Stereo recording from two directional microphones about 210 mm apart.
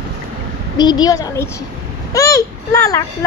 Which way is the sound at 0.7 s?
20° left (ahead or behind).